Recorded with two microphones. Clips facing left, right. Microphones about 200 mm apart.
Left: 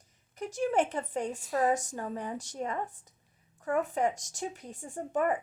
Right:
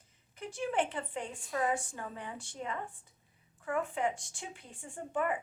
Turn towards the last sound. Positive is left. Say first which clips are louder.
# left 4 dB
turn(degrees=40)  # may be behind; listen again after turning